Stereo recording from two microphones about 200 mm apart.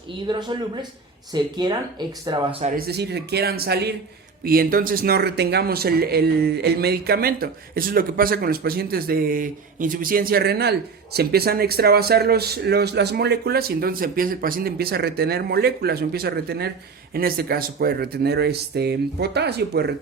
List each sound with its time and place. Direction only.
0.3 s speech: 20° right (ahead or behind)
2.6 s speech: 50° right (ahead or behind)